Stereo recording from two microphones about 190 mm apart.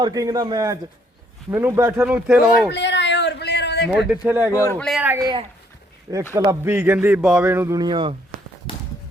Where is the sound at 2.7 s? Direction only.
70° left (ahead or behind).